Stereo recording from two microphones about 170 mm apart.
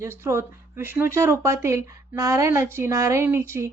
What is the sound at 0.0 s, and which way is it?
A woman's voice, 15° right (ahead or behind).